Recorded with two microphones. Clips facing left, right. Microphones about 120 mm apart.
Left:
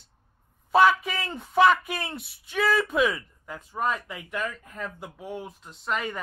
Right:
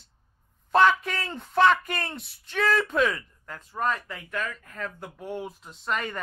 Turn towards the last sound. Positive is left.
turn(degrees=5)  # may be behind; listen again after turning